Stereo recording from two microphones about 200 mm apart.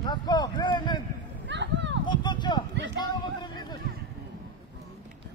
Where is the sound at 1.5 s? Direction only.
65° right (ahead or behind).